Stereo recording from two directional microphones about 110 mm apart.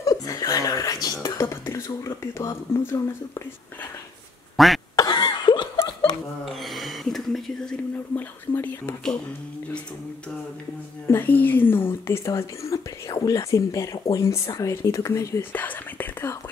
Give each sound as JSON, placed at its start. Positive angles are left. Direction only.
{"t": 0.3, "sound": "chuckle", "side_deg": 35}
{"t": 1.0, "sound": "speech", "side_deg": 30}
{"t": 4.6, "sound": "cough", "side_deg": 0}
{"t": 4.9, "sound": "cough", "side_deg": 40}
{"t": 6.4, "sound": "a sound", "side_deg": 0}
{"t": 8.2, "sound": "speech", "side_deg": 20}
{"t": 11.1, "sound": "speech", "side_deg": 20}
{"t": 15.5, "sound": "speech", "side_deg": 15}